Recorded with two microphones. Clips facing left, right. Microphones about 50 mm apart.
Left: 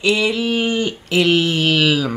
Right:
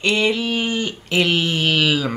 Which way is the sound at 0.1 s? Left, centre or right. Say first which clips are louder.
Even; centre.